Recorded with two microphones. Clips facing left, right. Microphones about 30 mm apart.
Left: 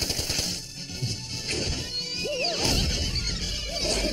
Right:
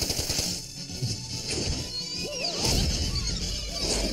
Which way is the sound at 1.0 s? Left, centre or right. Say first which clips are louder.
Left 2 dB; left.